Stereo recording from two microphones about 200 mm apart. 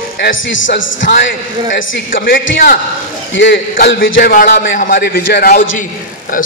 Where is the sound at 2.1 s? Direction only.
70° left (ahead or behind).